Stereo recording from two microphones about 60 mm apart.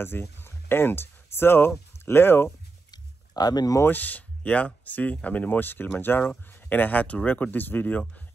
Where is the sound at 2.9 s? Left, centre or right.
Left.